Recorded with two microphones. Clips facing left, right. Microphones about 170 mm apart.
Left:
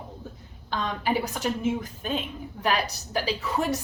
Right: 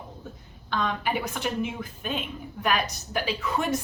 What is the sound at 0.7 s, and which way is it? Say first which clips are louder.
A woman's voice: left 1 dB; 35° left (ahead or behind).